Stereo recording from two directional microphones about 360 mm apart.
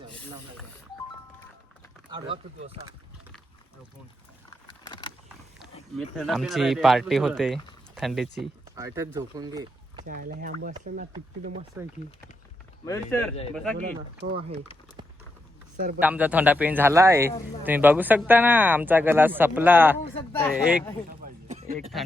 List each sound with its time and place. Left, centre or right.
2.0 s speech: centre
4.9 s vehicle: centre
6.0 s speech: centre
10.1 s speech: right
12.8 s speech: centre
16.0 s speech: centre
20.1 s speech: centre
21.1 s a sound: right
21.8 s speech: centre